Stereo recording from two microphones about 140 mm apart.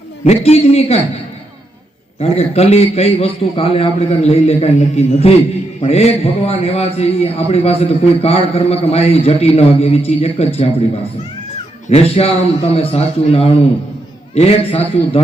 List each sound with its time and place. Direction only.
0.3 s a man's voice: 45° left (ahead or behind)
2.1 s a man's voice: 45° left (ahead or behind)
11.9 s a man's voice: 45° left (ahead or behind)